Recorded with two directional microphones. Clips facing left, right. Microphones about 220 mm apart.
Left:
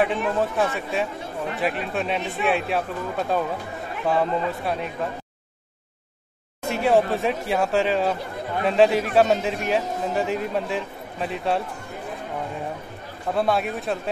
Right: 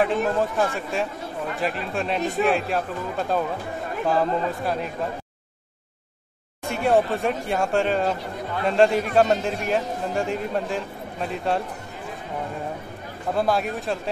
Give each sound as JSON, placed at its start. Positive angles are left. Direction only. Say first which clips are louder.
{"t": 0.6, "sound": "a man's voice", "louder": "even", "side_deg": 0}
{"t": 6.7, "sound": "a man's voice", "louder": "left 1 dB", "side_deg": 0}
{"t": 13.3, "sound": "a man's voice", "louder": "even", "side_deg": 0}